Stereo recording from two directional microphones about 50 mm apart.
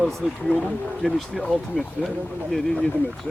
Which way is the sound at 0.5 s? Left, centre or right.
Left.